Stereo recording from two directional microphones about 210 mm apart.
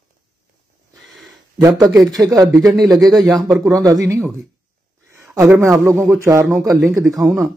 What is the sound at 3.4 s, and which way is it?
Speech, centre (ahead or behind).